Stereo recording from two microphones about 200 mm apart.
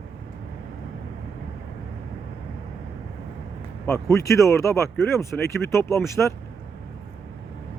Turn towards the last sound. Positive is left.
turn(degrees=15)  # may be behind; listen again after turning